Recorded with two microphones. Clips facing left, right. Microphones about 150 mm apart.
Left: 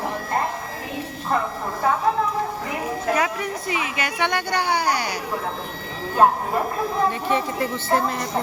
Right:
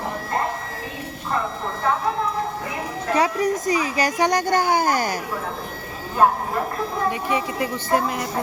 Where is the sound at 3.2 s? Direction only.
35° right (ahead or behind).